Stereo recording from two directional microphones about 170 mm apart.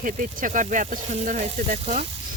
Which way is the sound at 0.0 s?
50° right (ahead or behind).